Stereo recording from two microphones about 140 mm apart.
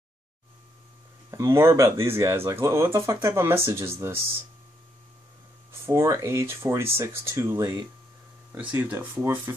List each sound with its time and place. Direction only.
1.3 s speech: 20° right (ahead or behind)
5.7 s speech: 20° right (ahead or behind)